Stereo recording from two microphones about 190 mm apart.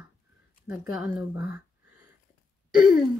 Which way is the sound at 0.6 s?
5° right (ahead or behind).